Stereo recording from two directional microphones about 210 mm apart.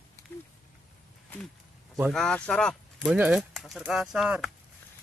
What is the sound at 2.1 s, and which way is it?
Speech, 5° left (ahead or behind).